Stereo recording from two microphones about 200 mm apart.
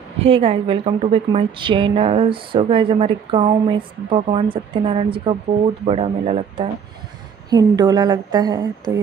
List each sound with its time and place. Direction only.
0.2 s speech: 30° right (ahead or behind)
7.4 s speech: 20° right (ahead or behind)